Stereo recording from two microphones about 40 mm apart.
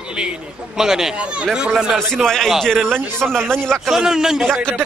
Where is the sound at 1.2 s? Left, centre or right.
Right.